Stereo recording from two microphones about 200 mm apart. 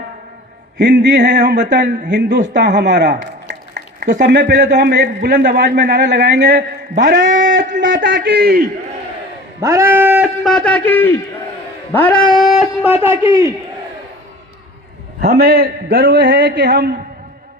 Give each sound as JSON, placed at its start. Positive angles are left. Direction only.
{"t": 0.8, "sound": "a man's voice", "side_deg": -60}
{"t": 7.3, "sound": "a sound", "side_deg": -60}
{"t": 7.8, "sound": "a man's voice", "side_deg": -60}
{"t": 9.6, "sound": "a man's voice", "side_deg": -15}
{"t": 15.2, "sound": "a man's voice", "side_deg": -50}